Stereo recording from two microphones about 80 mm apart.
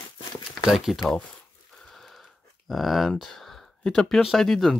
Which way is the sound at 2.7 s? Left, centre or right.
Centre.